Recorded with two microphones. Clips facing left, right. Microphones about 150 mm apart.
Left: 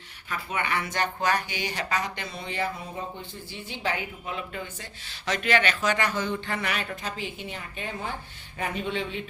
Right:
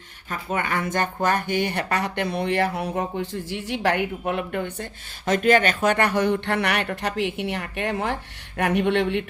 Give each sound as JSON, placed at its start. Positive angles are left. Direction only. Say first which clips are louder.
{"t": 0.3, "sound": "speech", "louder": "right 4 dB", "side_deg": -45}